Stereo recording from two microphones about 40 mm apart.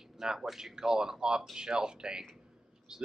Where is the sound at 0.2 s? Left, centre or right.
Centre.